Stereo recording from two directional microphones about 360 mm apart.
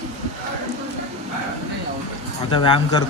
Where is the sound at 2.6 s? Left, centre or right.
Centre.